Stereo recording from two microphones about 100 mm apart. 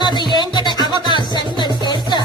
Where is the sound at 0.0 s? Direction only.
45° left (ahead or behind).